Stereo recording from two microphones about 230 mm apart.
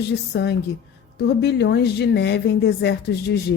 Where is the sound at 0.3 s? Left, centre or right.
Left.